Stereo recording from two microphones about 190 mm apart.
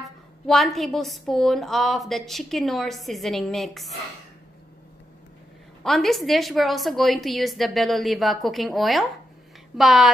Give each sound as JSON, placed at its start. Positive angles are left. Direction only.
{"t": 0.0, "sound": "a woman's voice", "side_deg": 0}
{"t": 5.9, "sound": "a woman's voice", "side_deg": 0}